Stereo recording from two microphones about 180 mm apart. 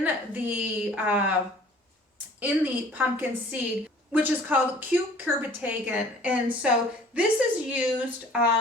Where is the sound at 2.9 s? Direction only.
10° right (ahead or behind).